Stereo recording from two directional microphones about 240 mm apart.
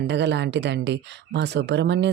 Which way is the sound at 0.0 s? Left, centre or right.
Right.